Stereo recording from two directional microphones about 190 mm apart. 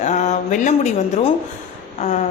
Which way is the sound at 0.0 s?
40° left (ahead or behind).